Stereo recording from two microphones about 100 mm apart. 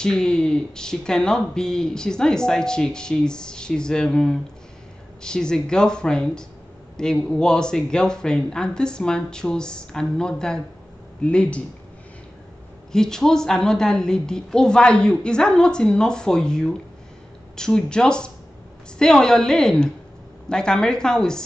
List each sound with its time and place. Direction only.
0.0 s speech: 5° left (ahead or behind)
12.9 s speech: 5° left (ahead or behind)